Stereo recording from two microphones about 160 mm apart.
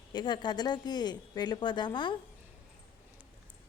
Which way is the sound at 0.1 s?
25° left (ahead or behind).